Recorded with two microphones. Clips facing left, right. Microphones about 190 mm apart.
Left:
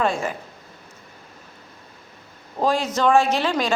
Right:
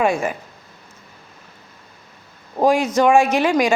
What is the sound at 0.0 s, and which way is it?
Speech, 15° right (ahead or behind).